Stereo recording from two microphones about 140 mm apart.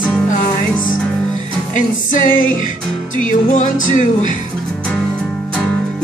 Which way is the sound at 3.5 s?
60° left (ahead or behind).